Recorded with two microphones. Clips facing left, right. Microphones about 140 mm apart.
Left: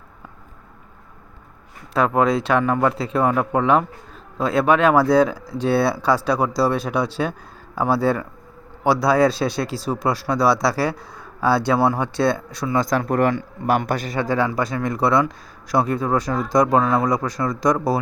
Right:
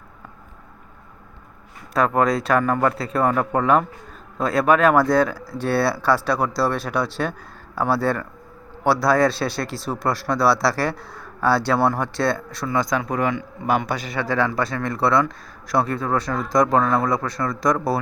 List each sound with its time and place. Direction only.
2.0 s speech: 5° left (ahead or behind)
13.0 s speech: 45° left (ahead or behind)
14.2 s speech: 15° left (ahead or behind)